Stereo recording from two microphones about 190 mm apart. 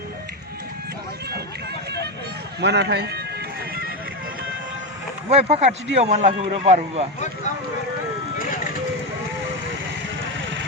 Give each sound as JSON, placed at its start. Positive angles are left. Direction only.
{"t": 2.6, "sound": "a man's voice", "side_deg": -60}
{"t": 5.3, "sound": "speech", "side_deg": -30}